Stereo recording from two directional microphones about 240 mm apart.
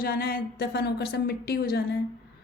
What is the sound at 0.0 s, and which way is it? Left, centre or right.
A woman's voice, left.